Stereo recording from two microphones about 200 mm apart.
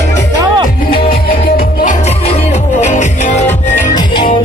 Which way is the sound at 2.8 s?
35° left (ahead or behind).